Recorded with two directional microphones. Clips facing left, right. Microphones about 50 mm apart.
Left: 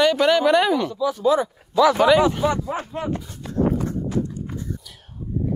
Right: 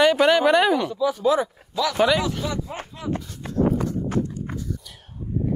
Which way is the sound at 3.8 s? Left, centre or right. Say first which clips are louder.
Even; right.